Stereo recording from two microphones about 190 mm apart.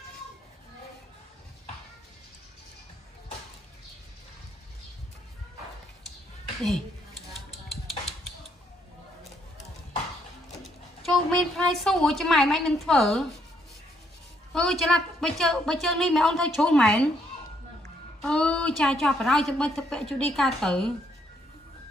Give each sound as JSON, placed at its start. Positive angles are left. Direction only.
{"t": 7.3, "sound": "music", "side_deg": 0}
{"t": 11.1, "sound": "a woman's voice", "side_deg": 0}
{"t": 14.5, "sound": "a woman's voice", "side_deg": 0}
{"t": 18.2, "sound": "a woman's voice", "side_deg": 5}